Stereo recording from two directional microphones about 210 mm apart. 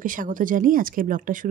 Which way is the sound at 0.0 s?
40° right (ahead or behind).